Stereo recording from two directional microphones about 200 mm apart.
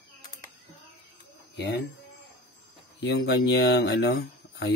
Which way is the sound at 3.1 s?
60° left (ahead or behind).